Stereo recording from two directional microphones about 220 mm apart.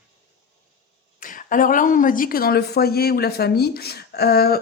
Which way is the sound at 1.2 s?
40° left (ahead or behind).